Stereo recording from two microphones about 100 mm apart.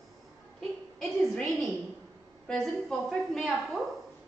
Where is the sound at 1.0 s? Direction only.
5° left (ahead or behind).